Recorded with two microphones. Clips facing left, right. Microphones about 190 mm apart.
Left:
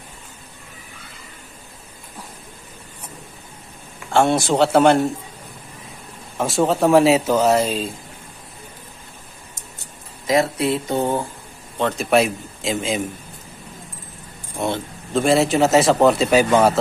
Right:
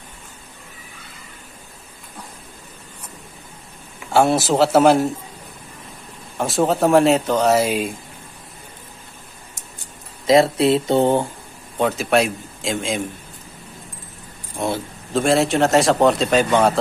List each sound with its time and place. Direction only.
4.1 s a man's voice: 5° right (ahead or behind)
6.3 s a man's voice: centre (ahead or behind)
7.5 s speech: 10° right (ahead or behind)
10.2 s speech: 30° right (ahead or behind)
11.8 s a man's voice: centre (ahead or behind)
14.6 s a man's voice: centre (ahead or behind)